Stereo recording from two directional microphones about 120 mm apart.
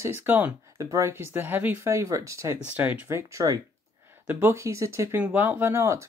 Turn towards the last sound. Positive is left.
turn(degrees=-20)  # may be behind; listen again after turning